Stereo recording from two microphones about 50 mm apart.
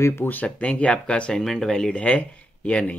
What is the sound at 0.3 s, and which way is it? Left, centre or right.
Speech, left.